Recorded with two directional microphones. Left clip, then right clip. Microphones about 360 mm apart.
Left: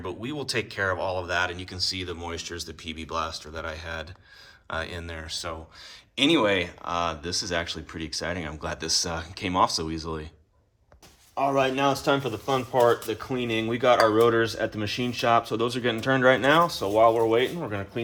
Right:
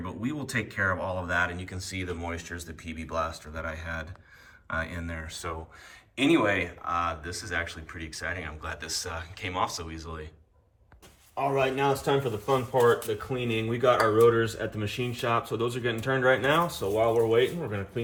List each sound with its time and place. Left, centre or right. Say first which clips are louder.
0.0 s speech: left 2 dB; centre
11.3 s speech: left 3 dB; left